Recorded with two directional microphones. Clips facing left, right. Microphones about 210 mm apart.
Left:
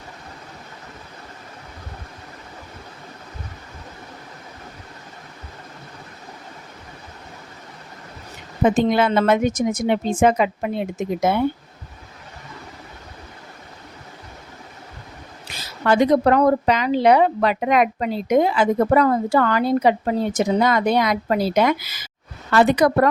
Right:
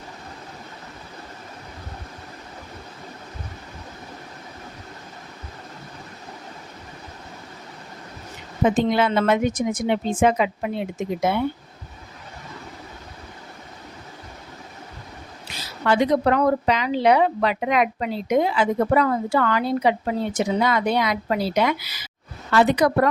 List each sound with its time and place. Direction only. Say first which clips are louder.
8.6 s speech: left 2 dB; 50° left (ahead or behind)
15.9 s speech: left 3 dB; 45° left (ahead or behind)